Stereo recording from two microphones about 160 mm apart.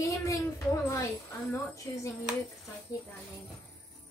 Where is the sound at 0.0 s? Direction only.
20° left (ahead or behind).